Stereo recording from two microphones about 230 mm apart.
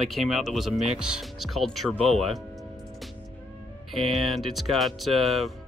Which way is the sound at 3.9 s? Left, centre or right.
Centre.